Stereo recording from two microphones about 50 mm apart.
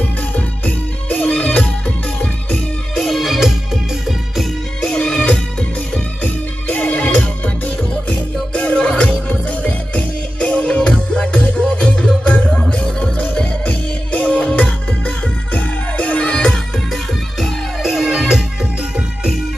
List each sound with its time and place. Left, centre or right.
0.3 s music: left
1.1 s music: left
3.0 s music: centre
4.8 s music: centre
17.8 s music: centre